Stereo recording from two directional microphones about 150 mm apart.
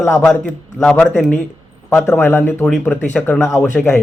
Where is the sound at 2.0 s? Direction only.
15° left (ahead or behind).